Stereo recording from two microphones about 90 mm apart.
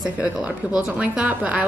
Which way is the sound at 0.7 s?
15° right (ahead or behind).